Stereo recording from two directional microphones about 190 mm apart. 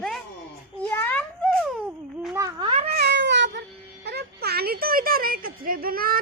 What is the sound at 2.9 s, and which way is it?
Cat, 65° right (ahead or behind).